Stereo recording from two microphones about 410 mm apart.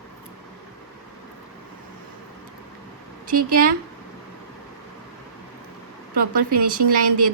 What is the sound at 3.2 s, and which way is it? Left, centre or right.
Speech, right.